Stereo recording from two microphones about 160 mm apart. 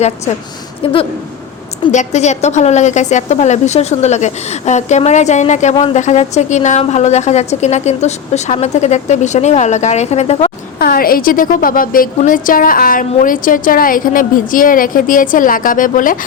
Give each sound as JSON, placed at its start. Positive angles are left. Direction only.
{"t": 1.9, "sound": "a woman's voice", "side_deg": 45}
{"t": 10.8, "sound": "a woman's voice", "side_deg": 65}